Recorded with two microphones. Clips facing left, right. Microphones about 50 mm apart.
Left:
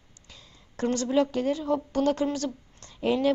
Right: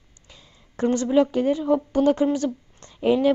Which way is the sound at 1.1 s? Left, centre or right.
Centre.